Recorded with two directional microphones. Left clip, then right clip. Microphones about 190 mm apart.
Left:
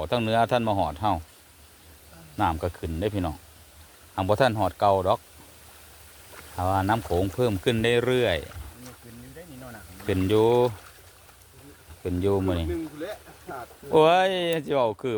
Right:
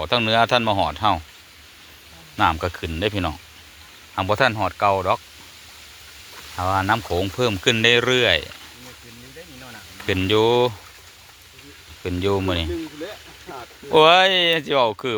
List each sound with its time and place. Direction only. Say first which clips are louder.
0.0 s speech: right 5 dB; 5° left (ahead or behind)
2.4 s speech: right 6 dB; centre (ahead or behind)
4.2 s speech: right 3 dB; 15° left (ahead or behind)
6.6 s speech: right 4 dB; 10° left (ahead or behind)
10.1 s speech: right 3 dB; 5° left (ahead or behind)
12.0 s speech: right 3 dB; 5° left (ahead or behind)
13.0 s a sound: right 2 dB; 20° left (ahead or behind)
13.9 s speech: right 6 dB; 5° left (ahead or behind)